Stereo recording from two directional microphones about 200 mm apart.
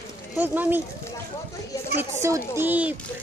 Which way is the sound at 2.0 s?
15° right (ahead or behind).